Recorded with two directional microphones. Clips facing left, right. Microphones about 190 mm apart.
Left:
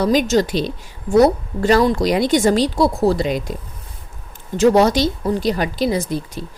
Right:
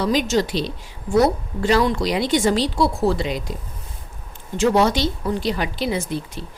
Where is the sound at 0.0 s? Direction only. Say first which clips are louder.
Left 4 dB; 45° left (ahead or behind).